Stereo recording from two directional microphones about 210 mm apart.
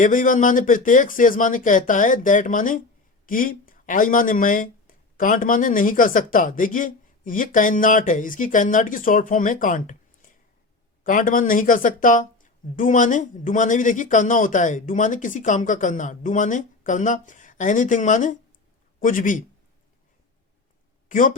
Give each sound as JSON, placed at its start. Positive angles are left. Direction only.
{"t": 0.0, "sound": "speech", "side_deg": 40}
{"t": 11.0, "sound": "speech", "side_deg": 40}
{"t": 21.1, "sound": "speech", "side_deg": 40}